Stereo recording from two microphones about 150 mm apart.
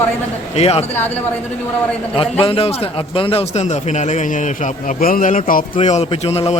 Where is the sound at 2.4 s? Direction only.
40° left (ahead or behind); by 5.7 s 60° left (ahead or behind).